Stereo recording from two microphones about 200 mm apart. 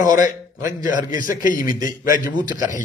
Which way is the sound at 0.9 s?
40° left (ahead or behind).